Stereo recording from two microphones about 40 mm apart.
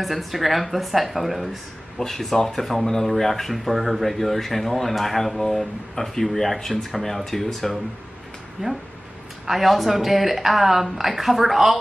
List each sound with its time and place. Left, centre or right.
0.0 s speech: centre
8.6 s speech: right
9.5 s speech: centre